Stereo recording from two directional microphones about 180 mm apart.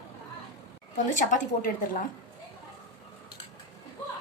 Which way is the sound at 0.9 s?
45° left (ahead or behind).